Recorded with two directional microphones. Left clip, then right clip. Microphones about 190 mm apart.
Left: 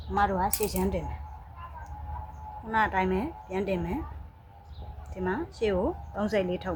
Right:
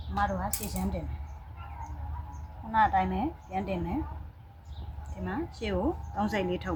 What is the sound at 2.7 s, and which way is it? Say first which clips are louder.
A woman's voice: right 1 dB; 35° left (ahead or behind).